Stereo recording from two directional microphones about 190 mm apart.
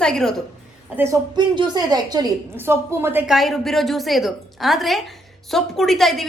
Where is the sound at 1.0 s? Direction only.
20° right (ahead or behind).